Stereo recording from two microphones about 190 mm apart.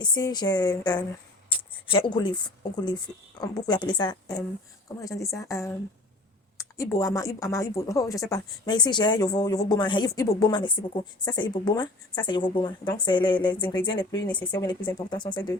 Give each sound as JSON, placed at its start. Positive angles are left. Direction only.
{"t": 0.0, "sound": "speech", "side_deg": 20}